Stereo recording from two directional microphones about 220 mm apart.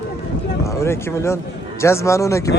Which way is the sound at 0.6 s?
15° left (ahead or behind).